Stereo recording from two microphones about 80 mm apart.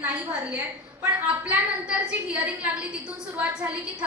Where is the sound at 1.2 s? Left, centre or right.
Centre.